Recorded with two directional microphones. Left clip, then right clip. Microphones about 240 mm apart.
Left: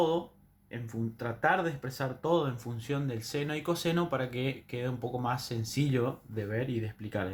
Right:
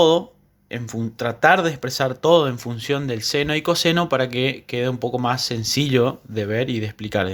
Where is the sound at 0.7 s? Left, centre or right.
Right.